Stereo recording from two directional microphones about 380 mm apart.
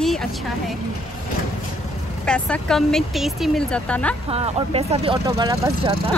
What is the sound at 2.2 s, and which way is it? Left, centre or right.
Speech, centre.